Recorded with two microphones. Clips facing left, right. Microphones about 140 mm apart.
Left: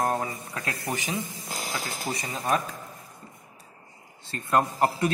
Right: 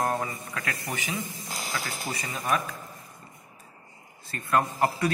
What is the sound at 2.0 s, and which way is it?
Speech, 20° left (ahead or behind).